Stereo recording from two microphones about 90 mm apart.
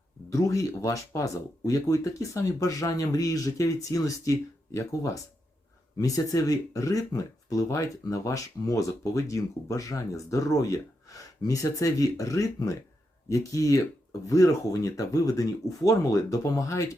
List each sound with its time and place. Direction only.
0.3 s speech: 35° left (ahead or behind)